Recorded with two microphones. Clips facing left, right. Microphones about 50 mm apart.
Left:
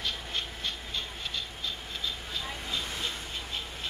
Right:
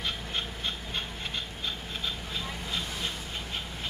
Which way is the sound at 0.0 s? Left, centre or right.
Right.